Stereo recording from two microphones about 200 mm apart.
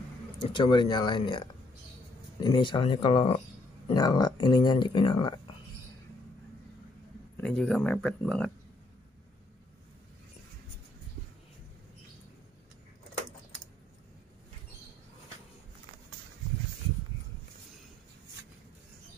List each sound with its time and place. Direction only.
0.4 s speech: 25° left (ahead or behind)
2.4 s speech: 20° left (ahead or behind)
7.3 s speech: 5° left (ahead or behind)